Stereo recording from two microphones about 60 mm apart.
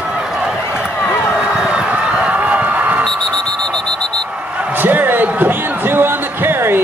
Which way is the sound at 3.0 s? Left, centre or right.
Centre.